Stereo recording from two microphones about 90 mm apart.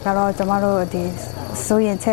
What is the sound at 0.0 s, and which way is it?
Speech, 20° left (ahead or behind).